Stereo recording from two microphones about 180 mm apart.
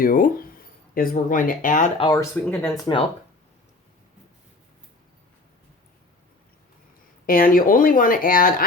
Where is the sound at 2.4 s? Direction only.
10° left (ahead or behind).